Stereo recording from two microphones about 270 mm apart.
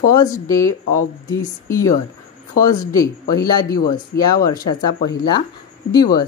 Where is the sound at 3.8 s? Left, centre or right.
Left.